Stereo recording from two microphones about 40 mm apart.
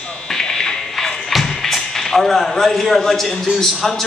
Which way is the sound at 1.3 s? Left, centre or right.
Centre.